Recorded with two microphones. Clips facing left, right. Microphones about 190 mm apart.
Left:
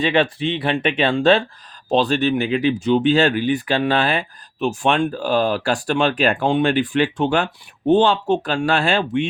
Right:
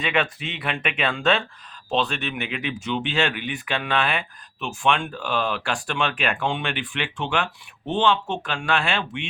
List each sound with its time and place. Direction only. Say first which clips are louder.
0.0 s speech: left 7 dB; 30° left (ahead or behind)